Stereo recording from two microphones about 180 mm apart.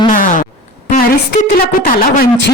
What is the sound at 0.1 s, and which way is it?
Music, 50° left (ahead or behind).